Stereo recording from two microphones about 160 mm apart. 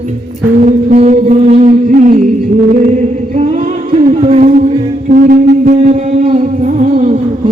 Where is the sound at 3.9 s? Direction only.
40° right (ahead or behind).